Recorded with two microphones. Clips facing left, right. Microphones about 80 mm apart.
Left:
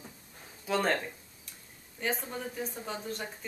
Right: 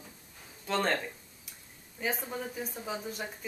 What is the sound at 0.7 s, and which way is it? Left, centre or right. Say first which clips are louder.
Speech: left 1 dB; centre.